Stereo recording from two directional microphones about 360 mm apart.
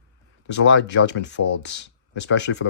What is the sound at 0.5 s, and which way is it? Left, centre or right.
Speech, left.